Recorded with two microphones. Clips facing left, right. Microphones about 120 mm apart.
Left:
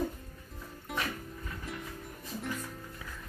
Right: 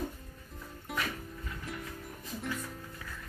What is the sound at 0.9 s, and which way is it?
Music, centre (ahead or behind).